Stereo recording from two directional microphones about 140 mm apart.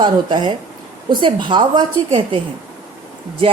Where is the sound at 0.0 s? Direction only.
35° right (ahead or behind).